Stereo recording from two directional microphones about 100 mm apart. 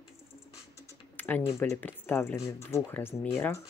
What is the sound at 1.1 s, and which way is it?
Typing, 15° left (ahead or behind).